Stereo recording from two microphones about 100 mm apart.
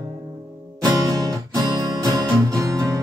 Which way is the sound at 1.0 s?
35° right (ahead or behind).